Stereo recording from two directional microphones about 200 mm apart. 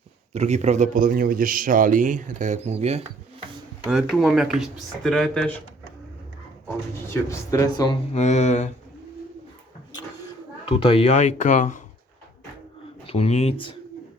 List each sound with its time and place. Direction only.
0.3 s speech: 35° right (ahead or behind)
3.8 s speech: centre (ahead or behind)
7.1 s speech: 15° left (ahead or behind)
8.1 s speech: 35° left (ahead or behind)
10.7 s speech: 30° left (ahead or behind)
13.1 s speech: 30° left (ahead or behind)